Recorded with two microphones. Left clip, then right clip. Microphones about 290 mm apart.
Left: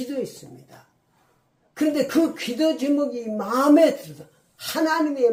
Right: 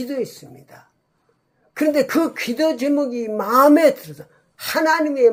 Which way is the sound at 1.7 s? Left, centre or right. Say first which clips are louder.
Right 4 dB; right.